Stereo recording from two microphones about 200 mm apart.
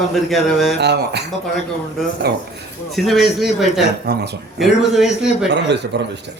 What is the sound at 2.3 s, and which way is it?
Speech, 55° right (ahead or behind).